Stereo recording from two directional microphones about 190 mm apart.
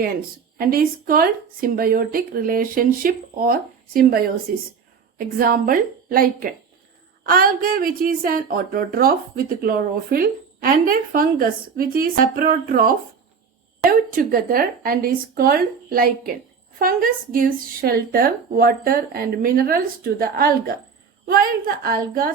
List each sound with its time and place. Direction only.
0.6 s speech: 50° right (ahead or behind)